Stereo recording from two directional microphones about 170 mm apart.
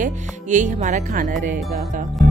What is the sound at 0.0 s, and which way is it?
Speech, 45° right (ahead or behind).